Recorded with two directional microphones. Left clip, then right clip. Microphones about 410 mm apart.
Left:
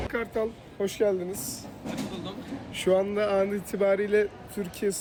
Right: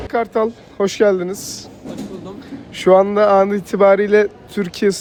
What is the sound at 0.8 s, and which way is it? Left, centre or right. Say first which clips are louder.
Speech: right 11 dB; centre.